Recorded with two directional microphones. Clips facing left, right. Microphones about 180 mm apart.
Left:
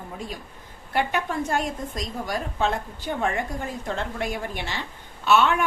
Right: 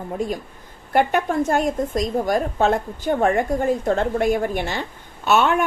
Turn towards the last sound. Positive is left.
turn(degrees=-45)  # may be behind; listen again after turning